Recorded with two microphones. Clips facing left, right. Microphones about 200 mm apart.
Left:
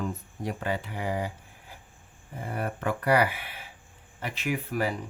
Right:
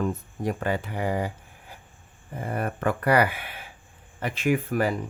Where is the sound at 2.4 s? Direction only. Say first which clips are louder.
Right 4 dB; 55° right (ahead or behind).